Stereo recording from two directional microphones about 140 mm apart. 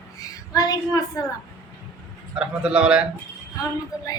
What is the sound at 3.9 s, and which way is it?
Speech, 25° left (ahead or behind).